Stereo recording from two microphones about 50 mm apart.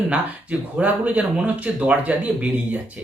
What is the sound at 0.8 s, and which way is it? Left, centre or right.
Speech, right.